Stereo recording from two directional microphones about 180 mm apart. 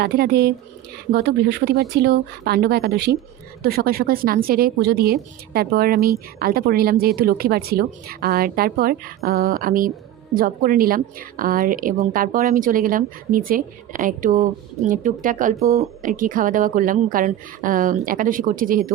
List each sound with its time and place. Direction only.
0.0 s a woman's voice: 60° right (ahead or behind)